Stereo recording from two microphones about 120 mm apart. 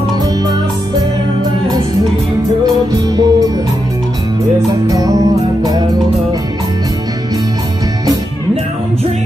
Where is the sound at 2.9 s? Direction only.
30° right (ahead or behind).